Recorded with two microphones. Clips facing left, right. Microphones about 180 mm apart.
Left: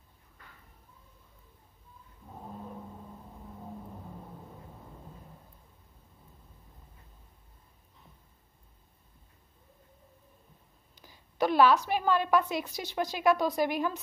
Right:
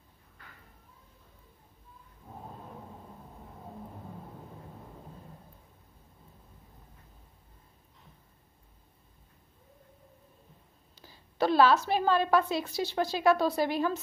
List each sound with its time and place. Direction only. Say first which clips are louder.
11.0 s a woman's voice: even; 15° left (ahead or behind)